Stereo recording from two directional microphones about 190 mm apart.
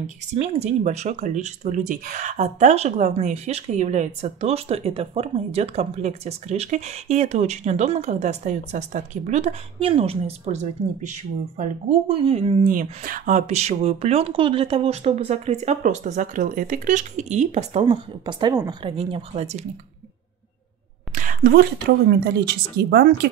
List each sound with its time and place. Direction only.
0.3 s speech: 35° right (ahead or behind)
12.1 s speech: 30° right (ahead or behind)
12.7 s speech: 45° right (ahead or behind)
21.1 s speech: 40° right (ahead or behind)